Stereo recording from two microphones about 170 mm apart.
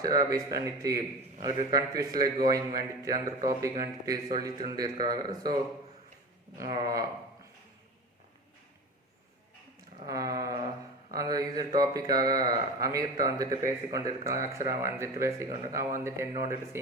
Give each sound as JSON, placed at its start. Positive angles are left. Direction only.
{"t": 0.0, "sound": "a man's voice", "side_deg": -20}
{"t": 6.6, "sound": "a man's voice", "side_deg": -20}
{"t": 10.1, "sound": "a man's voice", "side_deg": -20}